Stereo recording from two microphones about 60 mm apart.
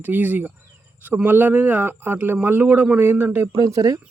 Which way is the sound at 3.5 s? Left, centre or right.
Right.